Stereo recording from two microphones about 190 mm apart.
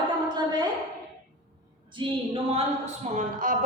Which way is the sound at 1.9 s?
25° right (ahead or behind).